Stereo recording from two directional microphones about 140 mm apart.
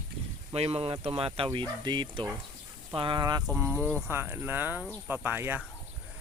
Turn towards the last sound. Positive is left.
turn(degrees=-15)  # may be behind; listen again after turning